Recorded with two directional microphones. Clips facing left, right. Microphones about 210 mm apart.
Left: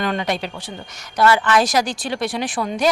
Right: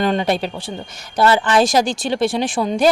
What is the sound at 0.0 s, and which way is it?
Speech, 30° right (ahead or behind).